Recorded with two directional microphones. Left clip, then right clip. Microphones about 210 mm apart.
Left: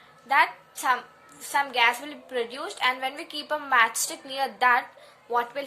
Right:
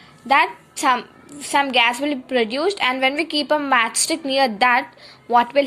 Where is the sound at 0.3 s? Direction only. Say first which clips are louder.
Right 5 dB; 20° right (ahead or behind).